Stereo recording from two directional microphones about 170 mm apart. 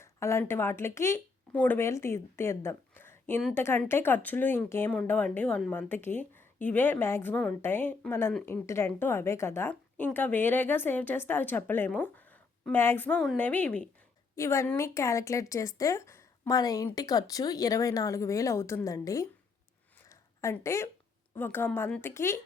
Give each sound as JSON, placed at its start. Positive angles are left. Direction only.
{"t": 0.0, "sound": "speech", "side_deg": 15}
{"t": 20.1, "sound": "a sound", "side_deg": 15}
{"t": 21.3, "sound": "speech", "side_deg": 10}